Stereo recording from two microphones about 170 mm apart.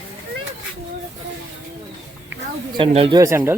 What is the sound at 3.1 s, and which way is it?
Speech, 15° right (ahead or behind).